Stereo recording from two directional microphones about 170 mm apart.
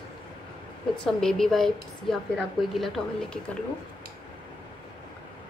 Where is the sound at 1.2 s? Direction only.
Centre (ahead or behind).